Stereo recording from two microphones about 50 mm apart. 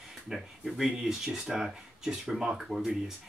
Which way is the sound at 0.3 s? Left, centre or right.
Centre.